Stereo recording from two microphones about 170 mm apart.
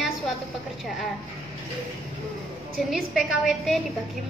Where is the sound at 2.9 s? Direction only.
Centre (ahead or behind).